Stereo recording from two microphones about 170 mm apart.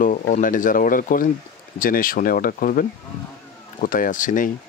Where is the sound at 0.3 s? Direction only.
50° left (ahead or behind).